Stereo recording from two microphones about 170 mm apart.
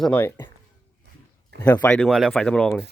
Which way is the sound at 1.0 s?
90° right.